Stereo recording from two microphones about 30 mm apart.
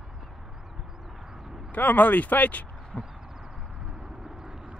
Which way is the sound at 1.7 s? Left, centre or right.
Left.